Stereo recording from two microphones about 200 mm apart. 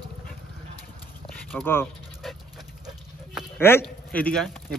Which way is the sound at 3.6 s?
10° left (ahead or behind).